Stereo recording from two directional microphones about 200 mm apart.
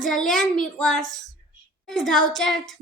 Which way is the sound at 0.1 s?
Centre (ahead or behind).